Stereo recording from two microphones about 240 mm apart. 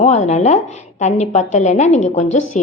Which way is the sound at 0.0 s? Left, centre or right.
Left.